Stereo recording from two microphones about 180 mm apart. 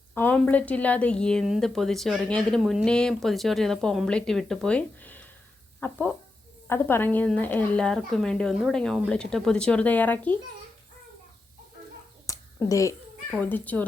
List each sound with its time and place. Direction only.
0.1 s a woman's voice: 10° left (ahead or behind)
12.2 s a sound: 20° left (ahead or behind)
13.3 s speech: 10° left (ahead or behind)